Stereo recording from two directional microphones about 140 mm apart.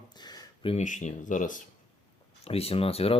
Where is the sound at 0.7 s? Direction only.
60° left (ahead or behind).